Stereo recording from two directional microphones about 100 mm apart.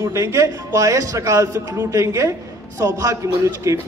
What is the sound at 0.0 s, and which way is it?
A man's voice, 30° right (ahead or behind).